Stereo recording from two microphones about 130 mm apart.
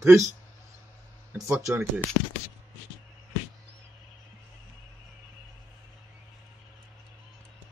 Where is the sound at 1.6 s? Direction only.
20° right (ahead or behind).